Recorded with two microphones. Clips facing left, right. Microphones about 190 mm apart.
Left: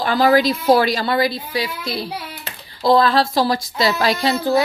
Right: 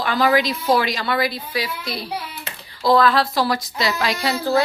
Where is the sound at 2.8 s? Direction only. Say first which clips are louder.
Left 1 dB; 30° left (ahead or behind).